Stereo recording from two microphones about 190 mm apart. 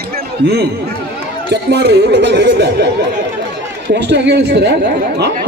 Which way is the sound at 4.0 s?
65° right (ahead or behind).